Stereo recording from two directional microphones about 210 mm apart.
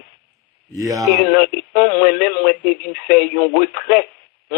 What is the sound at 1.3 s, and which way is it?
Speech, 45° left (ahead or behind).